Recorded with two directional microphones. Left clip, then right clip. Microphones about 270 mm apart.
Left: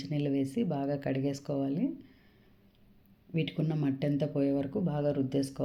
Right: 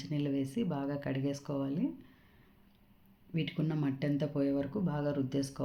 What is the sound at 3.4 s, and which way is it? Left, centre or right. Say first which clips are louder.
Speech: left 2 dB; centre.